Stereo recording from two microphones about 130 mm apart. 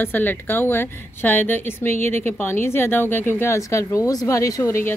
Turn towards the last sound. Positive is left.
turn(degrees=20)  # may be behind; listen again after turning